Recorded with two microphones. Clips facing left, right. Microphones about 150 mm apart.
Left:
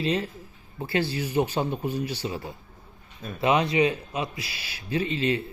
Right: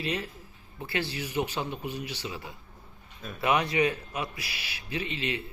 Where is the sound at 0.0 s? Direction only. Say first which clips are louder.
Left 6 dB; 30° left (ahead or behind).